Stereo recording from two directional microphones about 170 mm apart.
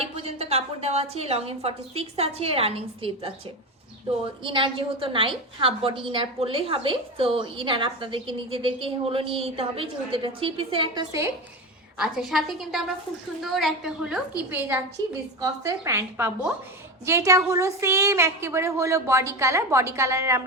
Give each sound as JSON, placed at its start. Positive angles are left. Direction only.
{"t": 0.0, "sound": "a sound", "side_deg": -35}
{"t": 1.1, "sound": "a woman's voice", "side_deg": -35}
{"t": 4.4, "sound": "a woman's voice", "side_deg": -30}
{"t": 11.9, "sound": "a woman's voice", "side_deg": -5}
{"t": 15.4, "sound": "a woman's voice", "side_deg": -20}